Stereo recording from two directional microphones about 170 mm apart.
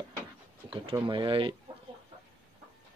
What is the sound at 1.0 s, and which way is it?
Speech, 30° right (ahead or behind).